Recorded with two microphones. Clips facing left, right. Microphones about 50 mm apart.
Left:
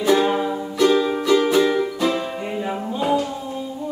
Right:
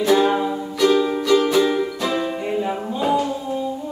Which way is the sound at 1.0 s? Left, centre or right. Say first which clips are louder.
Even; centre.